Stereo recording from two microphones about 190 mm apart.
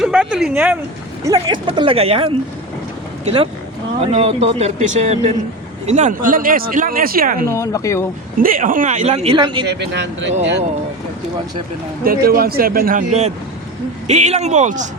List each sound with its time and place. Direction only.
0.0 s speech: 5° right (ahead or behind)
1.2 s speech: 20° right (ahead or behind); by 7.4 s 50° right (ahead or behind)
7.4 s speech: 15° left (ahead or behind)
8.4 s speech: 50° right (ahead or behind); by 9.6 s 25° right (ahead or behind)
9.6 s speech: 65° right (ahead or behind)
12.0 s speech: 50° right (ahead or behind)